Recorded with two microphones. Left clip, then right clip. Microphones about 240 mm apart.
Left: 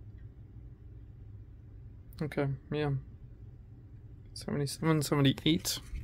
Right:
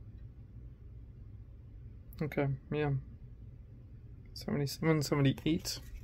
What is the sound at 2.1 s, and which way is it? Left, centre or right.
Speech, centre.